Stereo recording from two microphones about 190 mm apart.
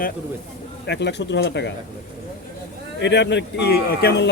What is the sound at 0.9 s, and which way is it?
Speech, 65° left (ahead or behind).